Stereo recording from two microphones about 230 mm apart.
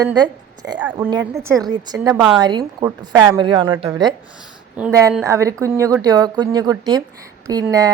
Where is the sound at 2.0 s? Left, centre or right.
Centre.